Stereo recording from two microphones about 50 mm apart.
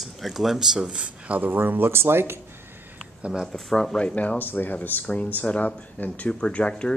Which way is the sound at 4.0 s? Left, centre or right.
Left.